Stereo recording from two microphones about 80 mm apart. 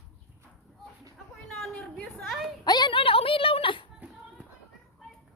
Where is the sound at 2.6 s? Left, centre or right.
Left.